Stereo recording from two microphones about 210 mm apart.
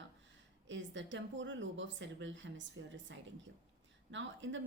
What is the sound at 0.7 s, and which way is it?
A woman's voice, 60° right (ahead or behind).